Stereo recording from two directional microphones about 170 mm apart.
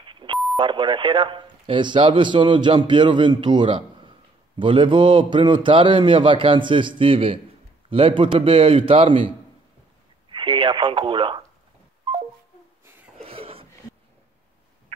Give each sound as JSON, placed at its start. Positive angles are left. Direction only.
{"t": 0.0, "sound": "beep", "side_deg": -30}
{"t": 0.6, "sound": "a man's voice", "side_deg": -25}
{"t": 10.3, "sound": "speech", "side_deg": -30}
{"t": 13.2, "sound": "a sound", "side_deg": -35}